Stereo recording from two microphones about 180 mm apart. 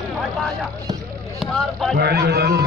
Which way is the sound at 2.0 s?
60° right (ahead or behind).